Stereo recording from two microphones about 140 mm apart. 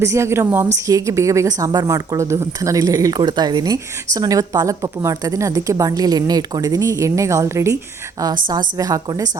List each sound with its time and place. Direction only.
0.0 s a woman's voice: 20° right (ahead or behind)